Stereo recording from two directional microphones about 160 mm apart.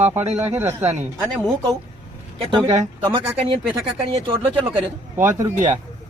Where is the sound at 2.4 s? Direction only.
25° right (ahead or behind).